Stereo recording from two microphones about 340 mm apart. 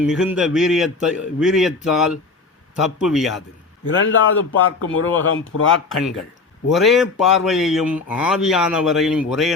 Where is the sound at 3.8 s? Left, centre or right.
Left.